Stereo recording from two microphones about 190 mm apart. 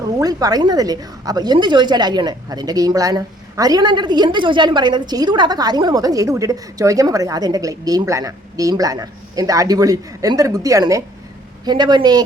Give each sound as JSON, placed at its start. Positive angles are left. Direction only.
{"t": 0.2, "sound": "a woman's voice", "side_deg": -20}